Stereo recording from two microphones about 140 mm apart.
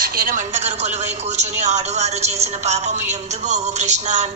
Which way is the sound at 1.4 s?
55° right (ahead or behind).